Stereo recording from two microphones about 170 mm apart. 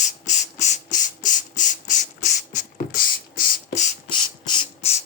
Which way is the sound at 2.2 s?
45° left (ahead or behind).